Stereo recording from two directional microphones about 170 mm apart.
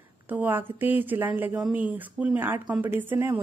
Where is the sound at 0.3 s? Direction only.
10° right (ahead or behind).